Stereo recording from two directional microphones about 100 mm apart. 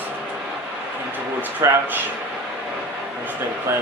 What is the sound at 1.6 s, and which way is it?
Speech, 30° right (ahead or behind).